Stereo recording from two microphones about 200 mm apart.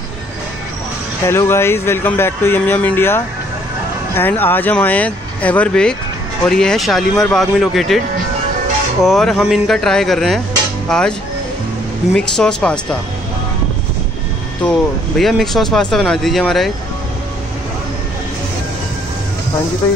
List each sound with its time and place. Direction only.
1.2 s speech: 15° left (ahead or behind)
9.0 s speech: centre (ahead or behind)
12.2 s speech: 5° left (ahead or behind)
14.6 s speech: 5° left (ahead or behind)